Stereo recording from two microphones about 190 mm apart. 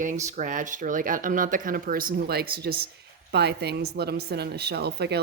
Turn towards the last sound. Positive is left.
turn(degrees=-60)  # may be behind; listen again after turning